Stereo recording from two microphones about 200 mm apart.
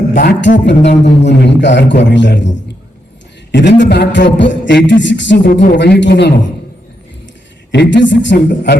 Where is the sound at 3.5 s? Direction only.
60° left (ahead or behind).